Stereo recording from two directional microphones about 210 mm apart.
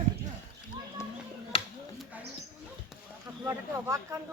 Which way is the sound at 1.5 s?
25° left (ahead or behind).